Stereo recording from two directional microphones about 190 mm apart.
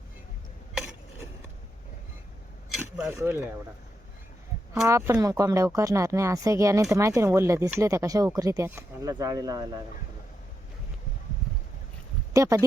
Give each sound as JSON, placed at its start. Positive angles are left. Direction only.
{"t": 2.6, "sound": "a sound", "side_deg": 0}
{"t": 3.1, "sound": "speech", "side_deg": -10}
{"t": 4.9, "sound": "speech", "side_deg": -15}
{"t": 12.3, "sound": "speech", "side_deg": -15}